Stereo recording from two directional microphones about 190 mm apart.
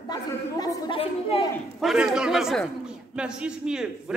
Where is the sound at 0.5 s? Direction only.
25° left (ahead or behind).